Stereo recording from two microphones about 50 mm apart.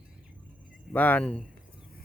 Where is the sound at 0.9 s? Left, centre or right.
Left.